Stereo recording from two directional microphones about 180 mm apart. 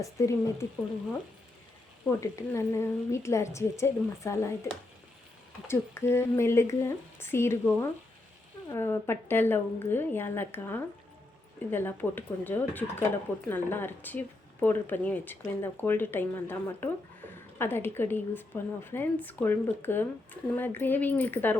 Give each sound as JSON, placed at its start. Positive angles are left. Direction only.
{"t": 0.0, "sound": "a woman's voice", "side_deg": 15}
{"t": 2.0, "sound": "a woman's voice", "side_deg": 15}
{"t": 5.6, "sound": "a woman's voice", "side_deg": 15}